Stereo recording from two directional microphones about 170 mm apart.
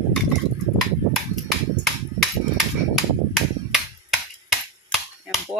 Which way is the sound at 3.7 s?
Centre (ahead or behind).